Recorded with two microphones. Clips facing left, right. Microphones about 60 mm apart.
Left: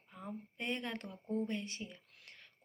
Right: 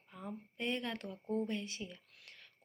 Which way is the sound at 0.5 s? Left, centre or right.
Left.